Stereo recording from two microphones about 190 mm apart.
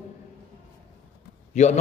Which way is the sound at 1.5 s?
35° left (ahead or behind).